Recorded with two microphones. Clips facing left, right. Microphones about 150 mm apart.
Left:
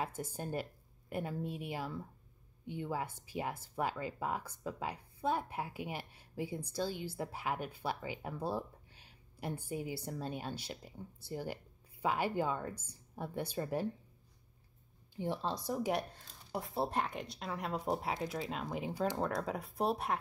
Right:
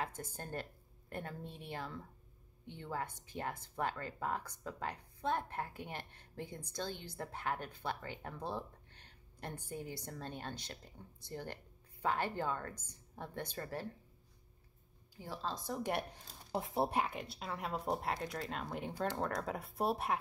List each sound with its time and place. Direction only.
0.0 s speech: 10° left (ahead or behind)
15.1 s speech: 20° left (ahead or behind); by 16.1 s centre (ahead or behind)
16.5 s speech: 20° right (ahead or behind)
16.9 s speech: 5° right (ahead or behind)